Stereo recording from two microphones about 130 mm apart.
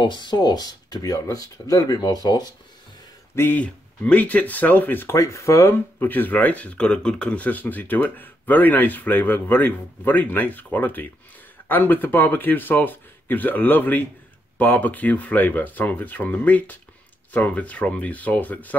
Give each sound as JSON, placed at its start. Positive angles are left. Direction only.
{"t": 0.0, "sound": "speech", "side_deg": 35}
{"t": 3.3, "sound": "speech", "side_deg": 15}